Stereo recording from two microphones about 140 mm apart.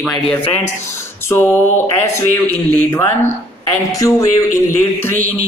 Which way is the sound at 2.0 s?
20° left (ahead or behind).